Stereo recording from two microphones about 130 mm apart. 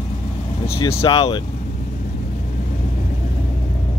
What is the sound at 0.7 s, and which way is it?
Speech, 45° left (ahead or behind).